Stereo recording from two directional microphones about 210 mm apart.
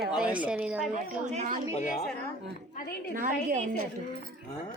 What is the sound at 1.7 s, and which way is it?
Speech, 35° left (ahead or behind).